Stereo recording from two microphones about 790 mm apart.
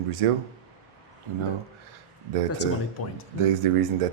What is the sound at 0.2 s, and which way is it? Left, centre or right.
Mantra, right.